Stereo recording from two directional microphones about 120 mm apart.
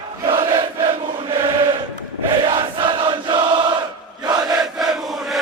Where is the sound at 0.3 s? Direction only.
45° right (ahead or behind).